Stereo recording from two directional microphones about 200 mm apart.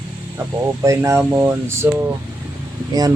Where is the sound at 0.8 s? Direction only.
15° right (ahead or behind).